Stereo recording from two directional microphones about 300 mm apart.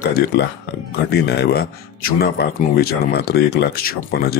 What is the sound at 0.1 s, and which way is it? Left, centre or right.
Speech, left.